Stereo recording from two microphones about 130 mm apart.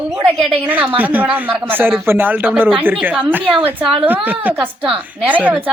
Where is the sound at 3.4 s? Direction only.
45° right (ahead or behind).